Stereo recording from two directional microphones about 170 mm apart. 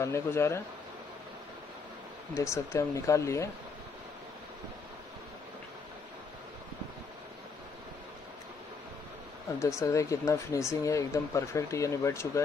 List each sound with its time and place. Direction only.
0.0 s speech: 15° left (ahead or behind)
2.3 s speech: 15° left (ahead or behind)
9.8 s speech: 20° left (ahead or behind)